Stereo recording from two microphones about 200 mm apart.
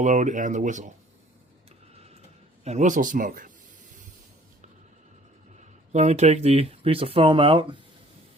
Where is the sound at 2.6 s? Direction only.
35° right (ahead or behind).